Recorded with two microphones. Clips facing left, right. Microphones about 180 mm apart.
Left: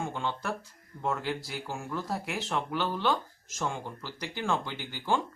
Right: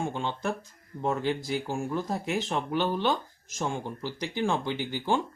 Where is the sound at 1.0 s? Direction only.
20° right (ahead or behind).